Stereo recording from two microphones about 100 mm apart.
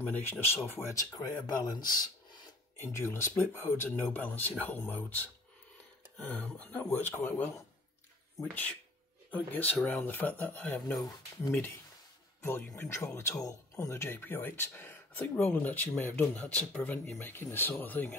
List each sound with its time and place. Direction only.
0.1 s speech: 20° left (ahead or behind)
0.9 s speech: 40° left (ahead or behind)
2.8 s speech: 25° left (ahead or behind)